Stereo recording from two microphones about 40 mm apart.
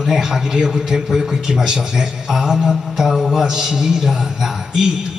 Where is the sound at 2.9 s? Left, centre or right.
Centre.